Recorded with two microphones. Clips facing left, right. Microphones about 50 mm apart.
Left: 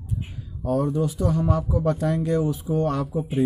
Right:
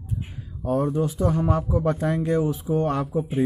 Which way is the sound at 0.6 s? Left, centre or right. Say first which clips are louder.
Even; right.